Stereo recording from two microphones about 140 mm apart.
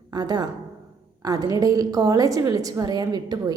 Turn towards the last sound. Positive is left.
turn(degrees=-30)  # may be behind; listen again after turning